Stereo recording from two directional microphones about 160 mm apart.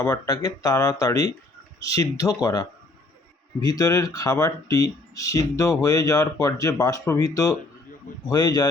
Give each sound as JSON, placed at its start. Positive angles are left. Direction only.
{"t": 0.0, "sound": "speech", "side_deg": 20}